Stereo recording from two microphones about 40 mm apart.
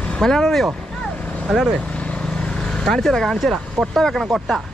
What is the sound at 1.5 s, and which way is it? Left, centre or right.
Speech, centre.